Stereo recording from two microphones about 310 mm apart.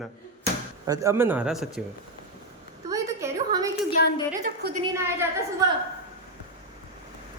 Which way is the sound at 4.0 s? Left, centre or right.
Left.